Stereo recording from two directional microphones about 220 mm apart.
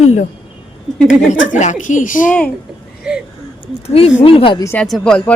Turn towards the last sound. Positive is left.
turn(degrees=5)  # may be behind; listen again after turning